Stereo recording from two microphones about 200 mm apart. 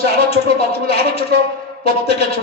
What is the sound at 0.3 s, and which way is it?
A man's voice, 30° left (ahead or behind).